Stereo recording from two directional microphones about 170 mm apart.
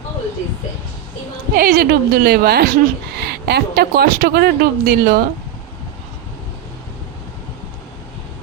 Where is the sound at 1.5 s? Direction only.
60° right (ahead or behind).